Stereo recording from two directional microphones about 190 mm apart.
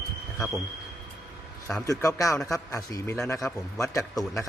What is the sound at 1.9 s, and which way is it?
A man's voice, 15° left (ahead or behind).